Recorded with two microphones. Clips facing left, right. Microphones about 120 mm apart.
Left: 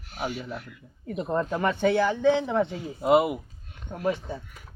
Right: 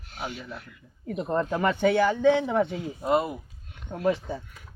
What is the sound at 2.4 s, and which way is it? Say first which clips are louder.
Speech: right 1 dB; 15° right (ahead or behind).